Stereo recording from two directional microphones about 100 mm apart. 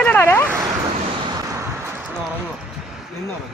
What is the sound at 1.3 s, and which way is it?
Vehicle, 35° right (ahead or behind).